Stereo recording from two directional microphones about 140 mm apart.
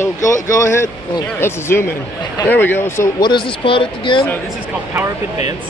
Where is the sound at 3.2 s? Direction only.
35° left (ahead or behind).